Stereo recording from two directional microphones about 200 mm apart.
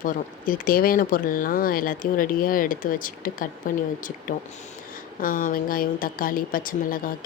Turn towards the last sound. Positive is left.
turn(degrees=45)  # may be behind; listen again after turning